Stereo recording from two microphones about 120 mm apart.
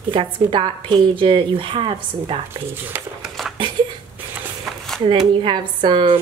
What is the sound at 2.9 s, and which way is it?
Speech, 15° right (ahead or behind).